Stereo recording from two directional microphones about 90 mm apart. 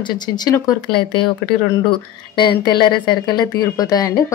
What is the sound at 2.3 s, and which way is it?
Speech, 60° left (ahead or behind).